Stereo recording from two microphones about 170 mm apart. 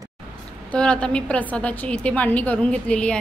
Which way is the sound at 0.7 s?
5° left (ahead or behind).